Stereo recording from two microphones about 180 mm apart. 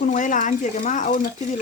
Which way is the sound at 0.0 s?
45° left (ahead or behind).